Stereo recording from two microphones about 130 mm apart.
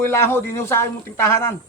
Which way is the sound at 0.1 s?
20° left (ahead or behind).